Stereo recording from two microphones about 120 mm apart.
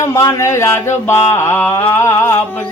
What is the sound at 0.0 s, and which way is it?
Carnatic music, 25° left (ahead or behind).